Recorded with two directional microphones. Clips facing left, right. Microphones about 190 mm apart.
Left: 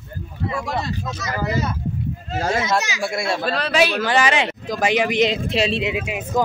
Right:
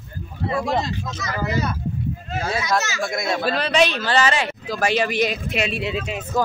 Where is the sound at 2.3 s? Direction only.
40° left (ahead or behind).